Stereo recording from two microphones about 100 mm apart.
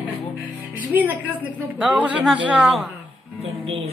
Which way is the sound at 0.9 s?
15° right (ahead or behind).